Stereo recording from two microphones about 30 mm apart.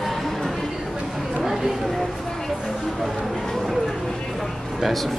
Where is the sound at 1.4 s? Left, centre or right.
Centre.